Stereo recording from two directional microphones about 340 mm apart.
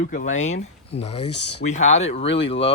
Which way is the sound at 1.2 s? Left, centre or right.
Left.